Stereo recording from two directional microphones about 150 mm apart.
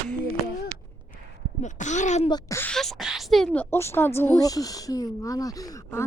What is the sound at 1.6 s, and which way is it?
Speech, 55° left (ahead or behind).